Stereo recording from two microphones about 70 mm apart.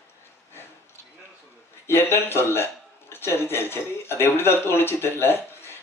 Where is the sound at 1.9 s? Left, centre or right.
Left.